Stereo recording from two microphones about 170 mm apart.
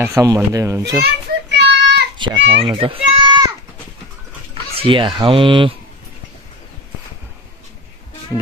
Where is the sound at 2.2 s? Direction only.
30° right (ahead or behind).